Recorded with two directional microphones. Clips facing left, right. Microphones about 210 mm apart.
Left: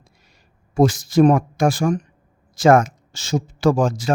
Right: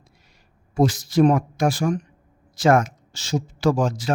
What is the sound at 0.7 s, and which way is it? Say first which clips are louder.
Speech: left 3 dB; 50° left (ahead or behind).